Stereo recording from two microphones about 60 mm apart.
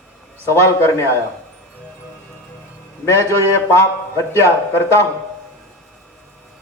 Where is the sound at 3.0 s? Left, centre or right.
Left.